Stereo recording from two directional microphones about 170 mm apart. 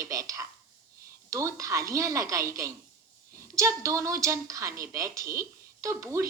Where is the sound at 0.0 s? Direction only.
20° right (ahead or behind).